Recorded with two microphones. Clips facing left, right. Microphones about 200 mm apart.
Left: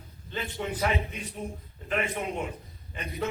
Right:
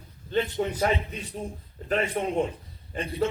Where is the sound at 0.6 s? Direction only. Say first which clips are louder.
Right 5 dB; 40° right (ahead or behind).